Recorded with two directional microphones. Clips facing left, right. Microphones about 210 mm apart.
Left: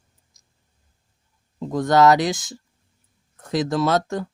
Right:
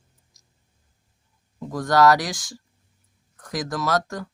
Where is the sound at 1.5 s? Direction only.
25° left (ahead or behind).